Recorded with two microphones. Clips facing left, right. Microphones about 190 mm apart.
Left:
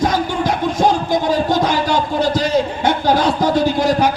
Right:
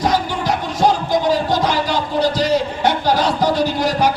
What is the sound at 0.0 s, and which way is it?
Music, 50° left (ahead or behind).